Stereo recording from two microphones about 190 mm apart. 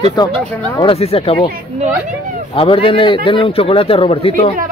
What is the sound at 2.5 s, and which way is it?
Speech, 30° left (ahead or behind).